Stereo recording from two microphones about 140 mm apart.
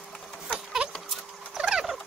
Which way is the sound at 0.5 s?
Centre (ahead or behind).